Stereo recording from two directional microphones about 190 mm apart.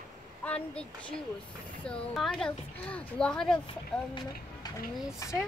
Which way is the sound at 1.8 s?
Centre (ahead or behind).